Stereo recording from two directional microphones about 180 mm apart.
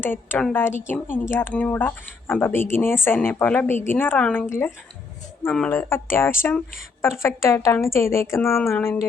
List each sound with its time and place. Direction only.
0.0 s speech: 10° left (ahead or behind)